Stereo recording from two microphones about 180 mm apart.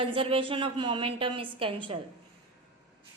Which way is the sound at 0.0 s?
30° right (ahead or behind).